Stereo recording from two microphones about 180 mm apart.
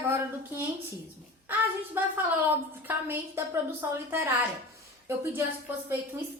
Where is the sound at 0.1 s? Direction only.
15° right (ahead or behind).